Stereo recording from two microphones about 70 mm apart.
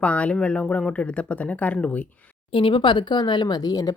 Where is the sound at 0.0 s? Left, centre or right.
Centre.